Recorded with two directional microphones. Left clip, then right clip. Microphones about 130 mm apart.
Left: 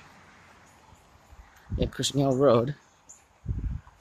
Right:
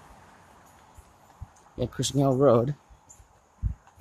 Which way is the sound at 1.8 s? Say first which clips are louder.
Even; 20° right (ahead or behind).